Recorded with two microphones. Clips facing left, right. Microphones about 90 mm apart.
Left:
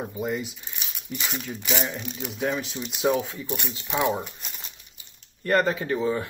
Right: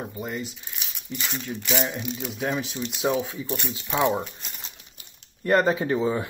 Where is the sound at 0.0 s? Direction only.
5° left (ahead or behind).